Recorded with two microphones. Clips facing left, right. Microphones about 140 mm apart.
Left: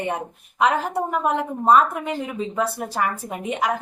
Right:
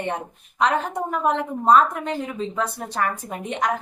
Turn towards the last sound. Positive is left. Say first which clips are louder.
# left 1 dB
turn(degrees=10)  # may be behind; listen again after turning